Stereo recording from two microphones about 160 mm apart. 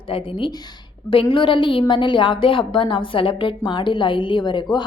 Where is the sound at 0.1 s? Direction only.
35° left (ahead or behind).